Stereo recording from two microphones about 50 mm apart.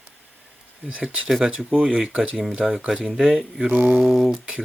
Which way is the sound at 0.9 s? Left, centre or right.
Right.